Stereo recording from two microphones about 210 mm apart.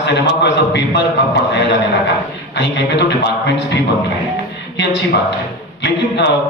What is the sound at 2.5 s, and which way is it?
Speech, 55° left (ahead or behind).